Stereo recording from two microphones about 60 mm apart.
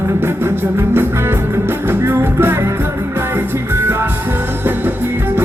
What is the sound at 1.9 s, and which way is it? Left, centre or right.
Music, right.